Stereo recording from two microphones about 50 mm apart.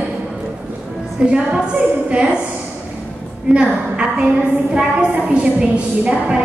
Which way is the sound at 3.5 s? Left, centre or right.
Centre.